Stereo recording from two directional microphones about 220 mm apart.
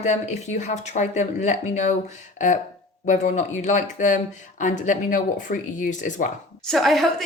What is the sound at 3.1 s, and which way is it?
Speech, 35° left (ahead or behind).